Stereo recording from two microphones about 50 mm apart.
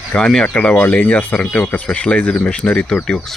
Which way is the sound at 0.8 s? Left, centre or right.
Left.